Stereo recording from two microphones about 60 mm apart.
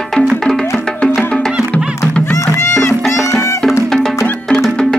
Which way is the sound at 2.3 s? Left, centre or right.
Left.